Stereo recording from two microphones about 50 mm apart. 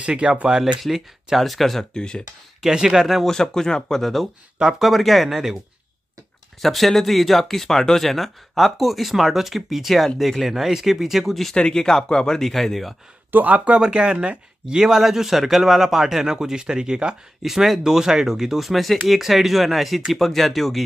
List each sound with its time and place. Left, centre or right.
0.0 s speech: right
0.8 s speech: centre
2.0 s speech: centre
2.6 s a man's voice: centre
3.3 s speech: centre
6.6 s speech: centre
11.5 s speech: centre
13.3 s speech: right
13.7 s a man's voice: centre